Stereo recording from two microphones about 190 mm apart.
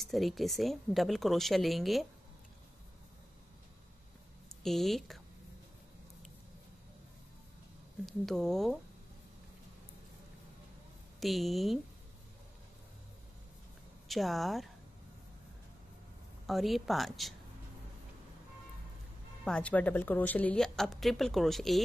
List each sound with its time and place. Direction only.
0.0 s a woman's voice: centre (ahead or behind)
4.6 s a woman's voice: centre (ahead or behind)
8.0 s a woman's voice: centre (ahead or behind)
11.1 s a woman's voice: centre (ahead or behind)
14.0 s a woman's voice: centre (ahead or behind)
16.4 s a woman's voice: centre (ahead or behind)
19.4 s a woman's voice: 5° left (ahead or behind)